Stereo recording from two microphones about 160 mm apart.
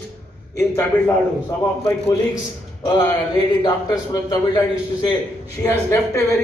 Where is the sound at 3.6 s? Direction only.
25° left (ahead or behind).